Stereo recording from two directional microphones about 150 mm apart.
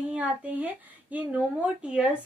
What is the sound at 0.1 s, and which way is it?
A woman's voice, 10° right (ahead or behind).